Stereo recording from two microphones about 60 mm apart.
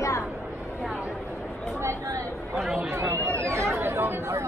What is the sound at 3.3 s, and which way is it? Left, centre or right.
Chatter, right.